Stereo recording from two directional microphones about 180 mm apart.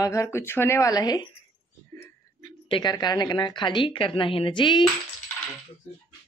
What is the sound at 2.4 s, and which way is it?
Speech, 25° left (ahead or behind).